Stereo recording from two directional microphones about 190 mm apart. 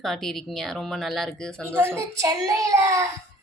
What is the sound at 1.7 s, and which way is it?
A child's voice, 10° right (ahead or behind).